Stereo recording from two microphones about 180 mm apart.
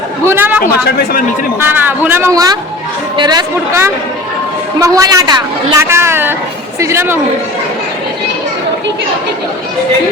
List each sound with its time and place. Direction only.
0.3 s a man's voice: 10° right (ahead or behind)
0.9 s speech: 65° left (ahead or behind)
1.6 s a man's voice: 10° right (ahead or behind)